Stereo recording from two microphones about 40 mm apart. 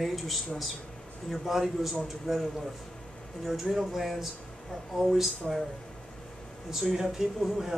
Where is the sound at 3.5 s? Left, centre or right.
Centre.